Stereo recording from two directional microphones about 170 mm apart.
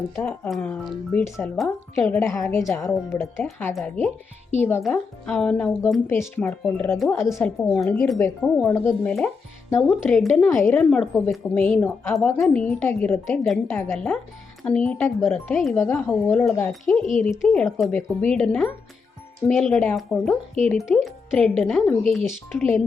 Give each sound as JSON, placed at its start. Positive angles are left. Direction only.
{"t": 0.2, "sound": "a woman's voice", "side_deg": 15}
{"t": 7.2, "sound": "a woman's voice", "side_deg": 15}
{"t": 7.4, "sound": "speech", "side_deg": 5}
{"t": 8.6, "sound": "a woman's voice", "side_deg": 15}
{"t": 16.2, "sound": "a woman's voice", "side_deg": 10}